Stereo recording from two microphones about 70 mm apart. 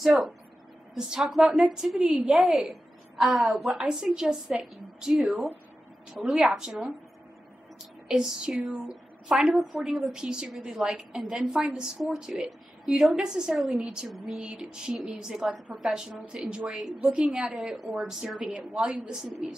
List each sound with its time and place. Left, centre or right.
0.0 s a woman's voice: centre
8.1 s a woman's voice: centre
18.9 s a woman's voice: centre